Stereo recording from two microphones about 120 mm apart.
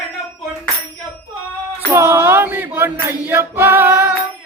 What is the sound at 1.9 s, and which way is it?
Music, 20° right (ahead or behind).